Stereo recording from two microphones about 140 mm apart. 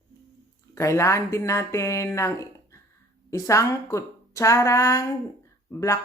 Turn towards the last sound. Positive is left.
turn(degrees=20)  # may be behind; listen again after turning